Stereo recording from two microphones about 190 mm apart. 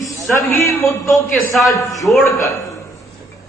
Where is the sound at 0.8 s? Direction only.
15° left (ahead or behind).